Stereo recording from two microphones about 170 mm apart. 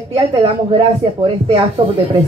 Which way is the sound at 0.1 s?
25° right (ahead or behind).